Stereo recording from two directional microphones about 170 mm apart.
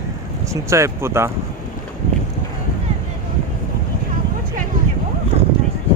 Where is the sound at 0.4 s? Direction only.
15° right (ahead or behind).